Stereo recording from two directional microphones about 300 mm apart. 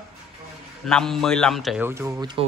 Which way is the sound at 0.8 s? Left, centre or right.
Centre.